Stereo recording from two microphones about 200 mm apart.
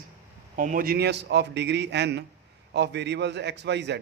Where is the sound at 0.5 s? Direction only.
40° right (ahead or behind); by 4.0 s 60° right (ahead or behind).